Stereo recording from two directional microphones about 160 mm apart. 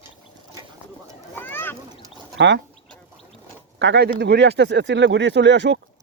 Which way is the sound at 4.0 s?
90° right.